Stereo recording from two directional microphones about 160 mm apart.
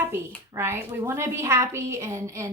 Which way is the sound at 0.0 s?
15° right (ahead or behind).